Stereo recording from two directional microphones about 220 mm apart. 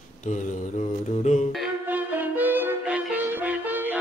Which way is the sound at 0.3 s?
35° left (ahead or behind).